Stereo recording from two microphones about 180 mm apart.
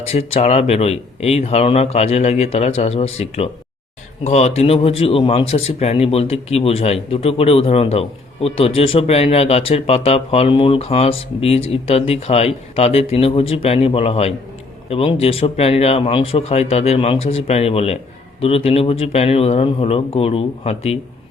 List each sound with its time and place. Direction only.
0.1 s speech: 35° left (ahead or behind)